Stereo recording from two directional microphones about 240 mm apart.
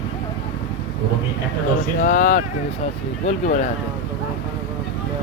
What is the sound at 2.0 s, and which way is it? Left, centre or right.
Speech, left.